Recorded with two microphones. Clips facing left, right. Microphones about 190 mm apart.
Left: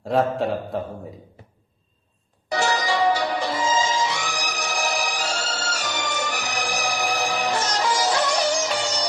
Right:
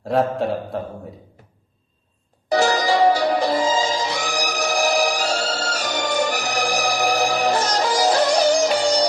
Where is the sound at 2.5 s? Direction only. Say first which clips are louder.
Right 5 dB; 35° right (ahead or behind).